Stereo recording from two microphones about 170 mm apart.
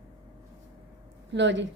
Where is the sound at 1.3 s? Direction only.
90° right.